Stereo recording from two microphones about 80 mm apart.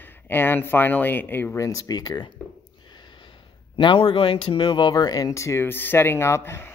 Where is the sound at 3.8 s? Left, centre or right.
Left.